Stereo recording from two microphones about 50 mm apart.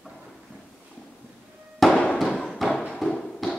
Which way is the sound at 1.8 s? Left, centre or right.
Centre.